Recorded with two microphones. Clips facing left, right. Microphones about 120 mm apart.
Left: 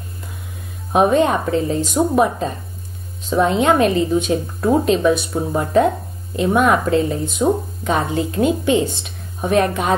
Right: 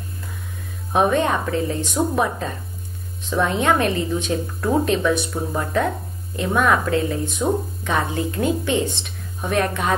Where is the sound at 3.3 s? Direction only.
25° left (ahead or behind).